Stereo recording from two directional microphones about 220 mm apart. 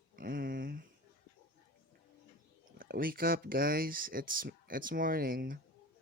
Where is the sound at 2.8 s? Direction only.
40° right (ahead or behind).